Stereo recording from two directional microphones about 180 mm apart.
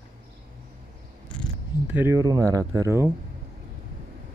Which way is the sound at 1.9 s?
15° right (ahead or behind).